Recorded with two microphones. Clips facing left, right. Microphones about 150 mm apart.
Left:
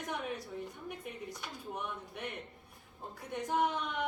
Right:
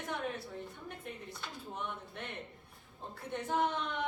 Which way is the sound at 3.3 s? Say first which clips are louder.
Left 1 dB; 10° left (ahead or behind).